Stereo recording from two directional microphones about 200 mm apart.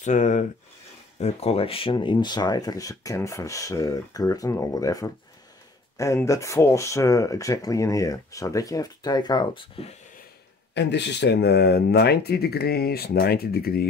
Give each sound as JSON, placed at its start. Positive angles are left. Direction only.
{"t": 0.0, "sound": "speech", "side_deg": 35}
{"t": 10.7, "sound": "speech", "side_deg": 60}